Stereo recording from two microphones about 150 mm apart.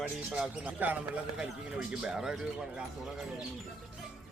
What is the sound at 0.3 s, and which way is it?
A man's voice, 5° right (ahead or behind).